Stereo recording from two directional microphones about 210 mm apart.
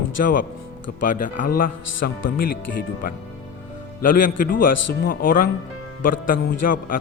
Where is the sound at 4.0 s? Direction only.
40° left (ahead or behind).